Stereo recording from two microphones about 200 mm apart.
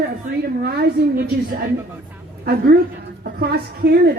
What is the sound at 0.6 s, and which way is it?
Speech, 50° right (ahead or behind).